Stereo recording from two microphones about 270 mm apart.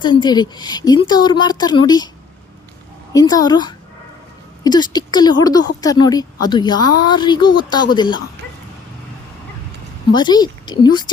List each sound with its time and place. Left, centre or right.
0.0 s a woman's voice: centre
3.1 s a woman's voice: centre
10.1 s a woman's voice: centre